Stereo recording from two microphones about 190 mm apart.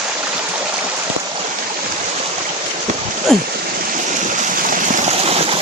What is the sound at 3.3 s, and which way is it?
Speech, centre (ahead or behind).